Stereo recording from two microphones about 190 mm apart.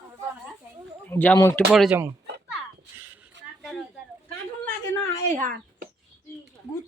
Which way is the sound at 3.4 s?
70° right (ahead or behind).